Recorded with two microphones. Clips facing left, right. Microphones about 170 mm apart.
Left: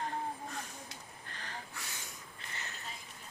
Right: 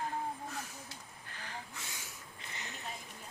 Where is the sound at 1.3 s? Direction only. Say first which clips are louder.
Even; 10° right (ahead or behind).